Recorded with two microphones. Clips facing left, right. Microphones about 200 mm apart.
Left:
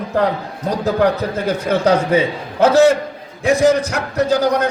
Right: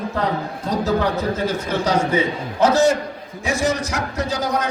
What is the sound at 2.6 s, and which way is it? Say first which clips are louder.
A man's voice: left 4 dB; 60° left (ahead or behind).